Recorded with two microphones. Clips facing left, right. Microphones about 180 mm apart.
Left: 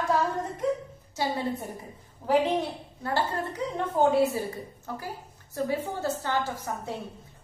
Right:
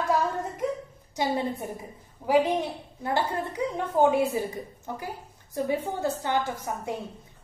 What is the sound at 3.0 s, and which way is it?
A woman's voice, 15° right (ahead or behind).